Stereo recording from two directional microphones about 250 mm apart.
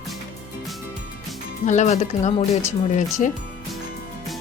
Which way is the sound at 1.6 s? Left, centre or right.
Left.